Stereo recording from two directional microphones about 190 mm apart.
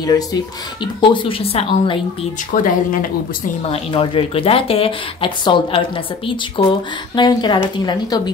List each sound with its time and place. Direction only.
0.0 s speech: 20° left (ahead or behind)
2.5 s speech: 45° left (ahead or behind)
3.7 s speech: 30° left (ahead or behind)